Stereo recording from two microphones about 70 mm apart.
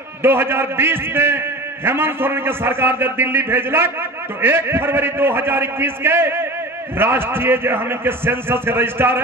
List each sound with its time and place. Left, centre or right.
0.2 s a man's voice: right